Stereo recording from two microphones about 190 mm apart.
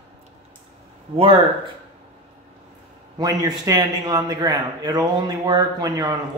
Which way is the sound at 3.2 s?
20° right (ahead or behind).